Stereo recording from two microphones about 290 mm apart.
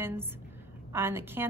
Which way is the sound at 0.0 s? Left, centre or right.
Centre.